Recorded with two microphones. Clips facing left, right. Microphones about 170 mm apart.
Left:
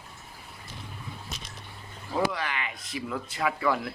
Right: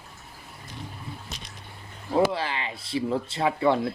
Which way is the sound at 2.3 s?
30° right (ahead or behind).